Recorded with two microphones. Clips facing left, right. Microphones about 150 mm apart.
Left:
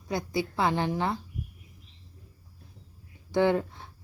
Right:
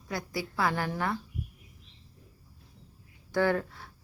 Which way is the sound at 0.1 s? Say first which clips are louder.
Left 5 dB; 20° left (ahead or behind).